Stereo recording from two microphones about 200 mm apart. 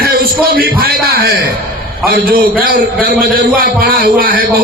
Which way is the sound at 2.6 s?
45° right (ahead or behind).